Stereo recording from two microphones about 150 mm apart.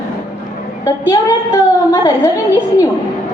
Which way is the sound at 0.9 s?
20° left (ahead or behind).